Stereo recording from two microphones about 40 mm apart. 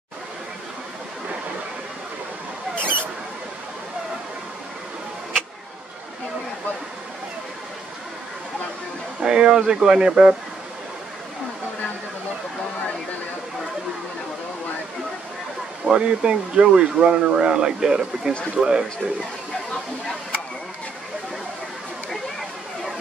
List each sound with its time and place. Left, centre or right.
2.7 s rodents: right
9.2 s speech: centre
15.9 s speech: right